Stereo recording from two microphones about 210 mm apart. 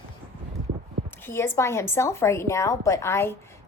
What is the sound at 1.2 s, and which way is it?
A woman's voice, 10° left (ahead or behind).